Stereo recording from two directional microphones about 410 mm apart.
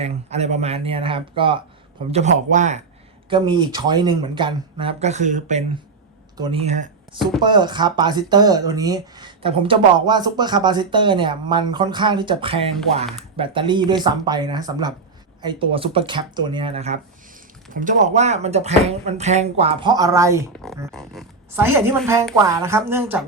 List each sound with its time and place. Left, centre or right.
0.0 s speech: centre